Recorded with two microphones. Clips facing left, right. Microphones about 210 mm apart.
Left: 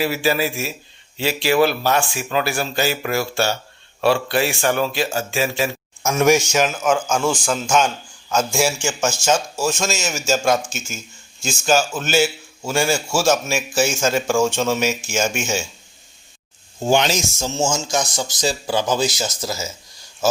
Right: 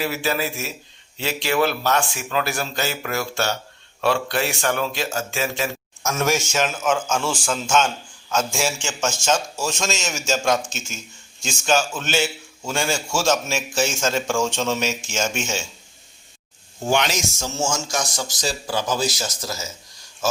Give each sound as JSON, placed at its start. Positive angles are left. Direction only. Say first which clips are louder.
{"t": 0.0, "sound": "a man's voice", "louder": "left 4 dB", "side_deg": 10}
{"t": 16.8, "sound": "speech", "louder": "left 4 dB", "side_deg": 30}